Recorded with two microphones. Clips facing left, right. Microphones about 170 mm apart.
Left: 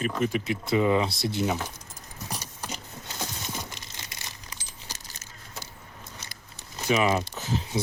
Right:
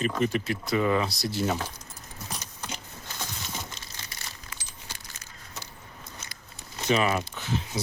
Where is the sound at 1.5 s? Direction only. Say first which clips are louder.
Even; 10° left (ahead or behind).